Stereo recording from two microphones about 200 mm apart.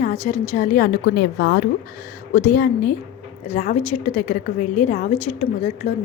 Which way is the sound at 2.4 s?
45° left (ahead or behind).